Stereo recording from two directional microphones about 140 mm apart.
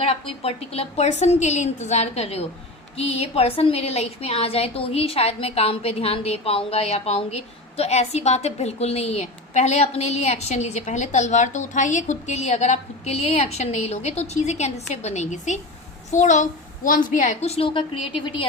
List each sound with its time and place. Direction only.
0.0 s a woman's voice: 45° left (ahead or behind)